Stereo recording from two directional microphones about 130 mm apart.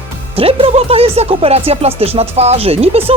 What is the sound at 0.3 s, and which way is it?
Speech, 50° right (ahead or behind).